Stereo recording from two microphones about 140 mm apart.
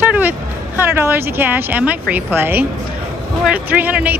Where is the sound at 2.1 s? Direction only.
15° right (ahead or behind).